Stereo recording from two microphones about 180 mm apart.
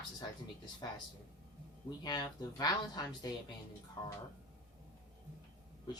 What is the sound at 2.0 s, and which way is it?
Speech, 20° left (ahead or behind).